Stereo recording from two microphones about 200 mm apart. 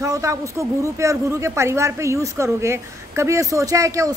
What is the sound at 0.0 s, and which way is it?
A woman's voice, 15° right (ahead or behind).